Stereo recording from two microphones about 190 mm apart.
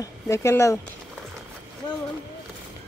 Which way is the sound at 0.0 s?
15° left (ahead or behind).